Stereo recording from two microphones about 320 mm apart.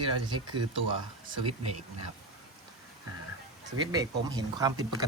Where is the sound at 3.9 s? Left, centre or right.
Centre.